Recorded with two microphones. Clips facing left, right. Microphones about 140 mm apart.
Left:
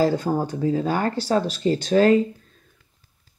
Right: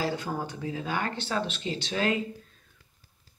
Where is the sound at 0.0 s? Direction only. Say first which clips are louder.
Left 10 dB; 45° left (ahead or behind).